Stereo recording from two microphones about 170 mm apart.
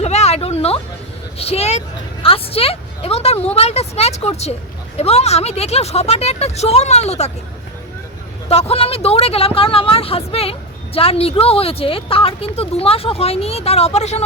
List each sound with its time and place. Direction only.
0.0 s music: 40° left (ahead or behind)
1.4 s speech: 35° left (ahead or behind)
8.4 s speech: 35° left (ahead or behind)